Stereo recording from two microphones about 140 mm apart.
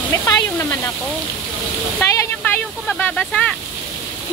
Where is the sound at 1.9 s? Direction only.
15° left (ahead or behind).